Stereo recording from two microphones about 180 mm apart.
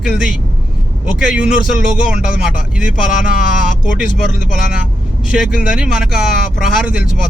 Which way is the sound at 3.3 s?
50° left (ahead or behind).